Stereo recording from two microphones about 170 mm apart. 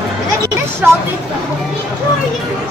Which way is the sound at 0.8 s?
10° right (ahead or behind).